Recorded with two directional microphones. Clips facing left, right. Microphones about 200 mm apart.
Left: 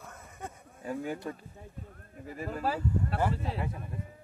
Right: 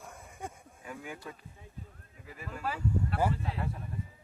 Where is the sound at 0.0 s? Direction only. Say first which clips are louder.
Even; 10° right (ahead or behind).